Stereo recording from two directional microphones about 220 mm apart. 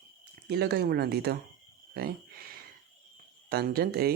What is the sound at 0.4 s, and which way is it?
Speech, 50° right (ahead or behind).